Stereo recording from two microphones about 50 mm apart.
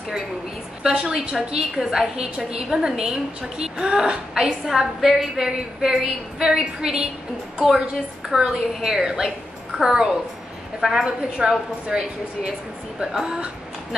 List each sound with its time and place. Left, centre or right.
0.8 s a woman's voice: centre
8.3 s a woman's voice: centre